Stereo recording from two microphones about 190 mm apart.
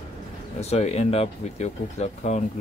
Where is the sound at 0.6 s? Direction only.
35° left (ahead or behind).